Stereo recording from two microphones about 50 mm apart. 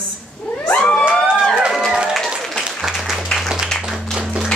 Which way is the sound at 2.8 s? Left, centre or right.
Centre.